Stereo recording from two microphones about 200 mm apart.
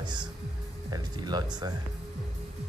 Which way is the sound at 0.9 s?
20° right (ahead or behind).